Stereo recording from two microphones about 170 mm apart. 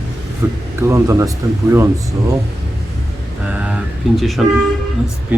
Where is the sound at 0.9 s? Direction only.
20° right (ahead or behind).